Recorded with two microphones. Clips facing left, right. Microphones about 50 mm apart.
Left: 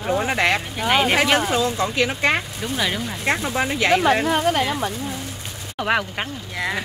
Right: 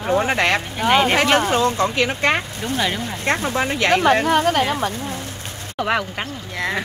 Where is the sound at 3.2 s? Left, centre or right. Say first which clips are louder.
Right 2 dB; right.